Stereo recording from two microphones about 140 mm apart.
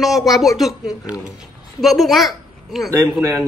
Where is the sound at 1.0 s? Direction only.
25° left (ahead or behind).